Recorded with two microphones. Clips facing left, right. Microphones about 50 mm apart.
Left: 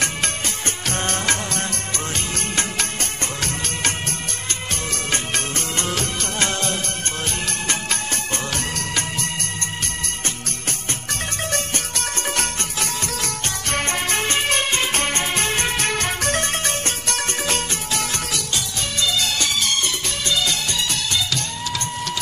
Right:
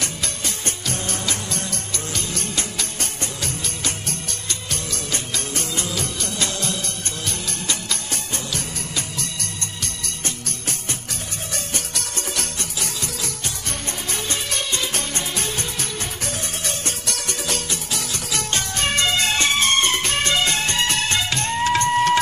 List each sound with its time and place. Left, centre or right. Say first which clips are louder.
0.8 s music: left 5 dB; left
5.1 s music: left 3 dB; left
12.4 s music: left 4 dB; left
18.5 s music: right 4 dB; right